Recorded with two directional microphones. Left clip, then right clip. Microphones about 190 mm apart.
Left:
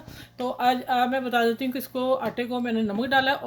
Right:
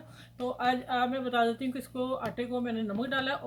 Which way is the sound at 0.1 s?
40° left (ahead or behind).